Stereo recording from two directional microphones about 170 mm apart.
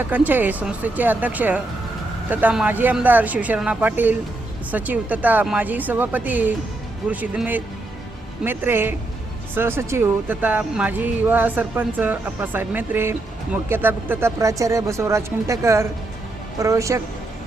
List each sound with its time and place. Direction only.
0.0 s speech: 10° right (ahead or behind)